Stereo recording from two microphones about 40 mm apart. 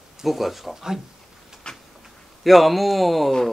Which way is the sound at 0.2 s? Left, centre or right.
Centre.